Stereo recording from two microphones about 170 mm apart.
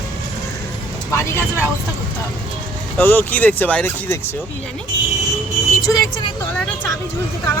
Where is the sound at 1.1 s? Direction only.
15° left (ahead or behind).